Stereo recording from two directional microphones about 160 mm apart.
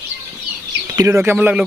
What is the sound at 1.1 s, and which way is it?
Speech, 10° right (ahead or behind).